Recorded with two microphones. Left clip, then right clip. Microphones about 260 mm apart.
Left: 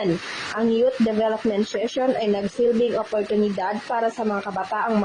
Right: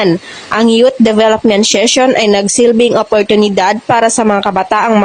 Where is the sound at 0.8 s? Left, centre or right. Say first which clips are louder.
Right 12 dB; right.